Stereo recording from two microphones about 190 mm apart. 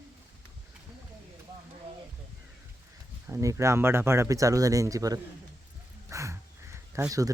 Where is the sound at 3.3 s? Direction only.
15° right (ahead or behind).